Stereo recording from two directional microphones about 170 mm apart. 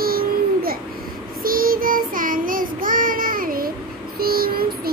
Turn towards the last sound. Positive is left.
turn(degrees=-60)  # may be behind; listen again after turning